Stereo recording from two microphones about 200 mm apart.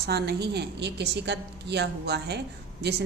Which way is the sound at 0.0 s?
55° right (ahead or behind).